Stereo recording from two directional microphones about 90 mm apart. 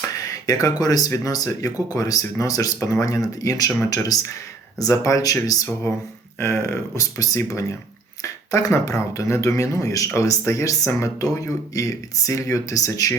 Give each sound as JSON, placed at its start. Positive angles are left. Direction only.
{"t": 0.3, "sound": "speech", "side_deg": 40}
{"t": 6.4, "sound": "speech", "side_deg": 30}